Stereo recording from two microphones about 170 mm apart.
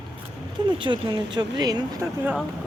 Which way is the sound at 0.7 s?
30° right (ahead or behind).